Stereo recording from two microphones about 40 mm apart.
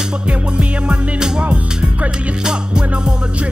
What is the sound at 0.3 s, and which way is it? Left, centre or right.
Music, right.